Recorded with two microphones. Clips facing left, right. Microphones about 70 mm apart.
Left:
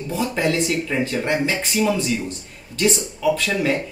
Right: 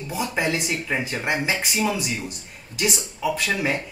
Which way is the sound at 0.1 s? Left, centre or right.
Centre.